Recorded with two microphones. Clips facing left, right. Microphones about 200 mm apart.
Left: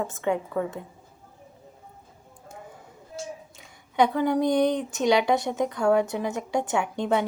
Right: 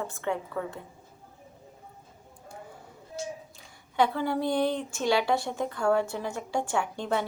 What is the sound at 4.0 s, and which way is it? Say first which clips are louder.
A woman's voice: left 4 dB; 15° left (ahead or behind).